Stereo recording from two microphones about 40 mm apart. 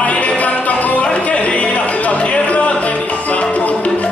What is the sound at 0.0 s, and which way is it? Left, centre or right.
Music, left.